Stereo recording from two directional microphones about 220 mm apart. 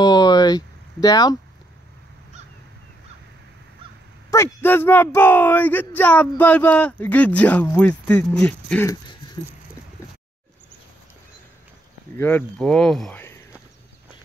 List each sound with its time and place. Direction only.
0.0 s a sound: 20° left (ahead or behind)
4.3 s speech: 10° left (ahead or behind)
12.2 s speech: 10° left (ahead or behind)